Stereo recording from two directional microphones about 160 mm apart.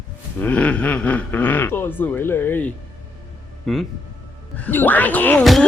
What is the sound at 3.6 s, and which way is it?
Speech, centre (ahead or behind).